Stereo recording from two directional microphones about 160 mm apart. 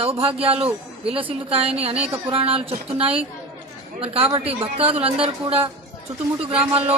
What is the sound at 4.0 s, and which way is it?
A man's voice, 35° right (ahead or behind).